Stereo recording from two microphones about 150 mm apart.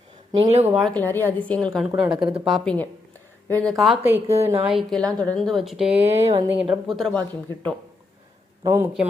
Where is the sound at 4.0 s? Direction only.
15° right (ahead or behind).